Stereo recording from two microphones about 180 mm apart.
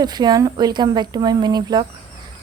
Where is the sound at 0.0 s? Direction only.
25° right (ahead or behind).